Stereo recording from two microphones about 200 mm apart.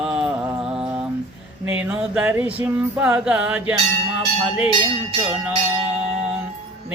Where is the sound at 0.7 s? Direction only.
10° right (ahead or behind).